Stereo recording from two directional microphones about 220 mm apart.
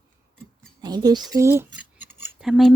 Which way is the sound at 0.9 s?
20° right (ahead or behind).